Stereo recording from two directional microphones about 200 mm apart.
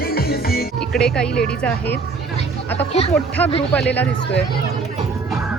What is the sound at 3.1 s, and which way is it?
Speech, 5° left (ahead or behind).